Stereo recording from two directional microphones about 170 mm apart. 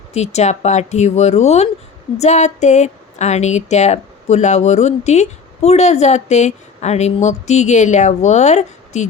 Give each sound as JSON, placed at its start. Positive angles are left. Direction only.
{"t": 0.1, "sound": "speech", "side_deg": 40}